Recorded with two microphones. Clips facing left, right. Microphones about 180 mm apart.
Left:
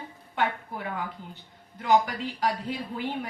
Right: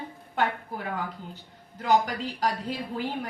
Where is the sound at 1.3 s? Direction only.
40° right (ahead or behind).